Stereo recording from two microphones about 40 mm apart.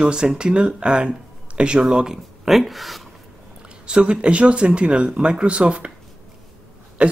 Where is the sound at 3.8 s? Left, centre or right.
Right.